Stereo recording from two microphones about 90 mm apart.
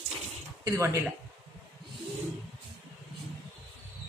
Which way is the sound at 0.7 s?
30° right (ahead or behind).